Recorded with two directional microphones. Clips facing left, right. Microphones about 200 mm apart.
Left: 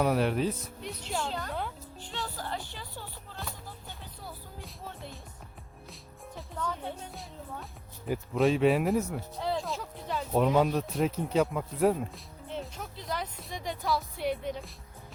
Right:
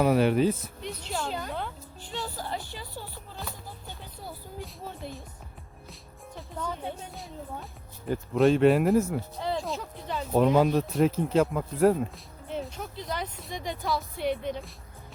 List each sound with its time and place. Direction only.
0.0 s speech: centre (ahead or behind)
2.0 s music: 10° right (ahead or behind)
6.6 s speech: 10° right (ahead or behind)
7.1 s speech: centre (ahead or behind)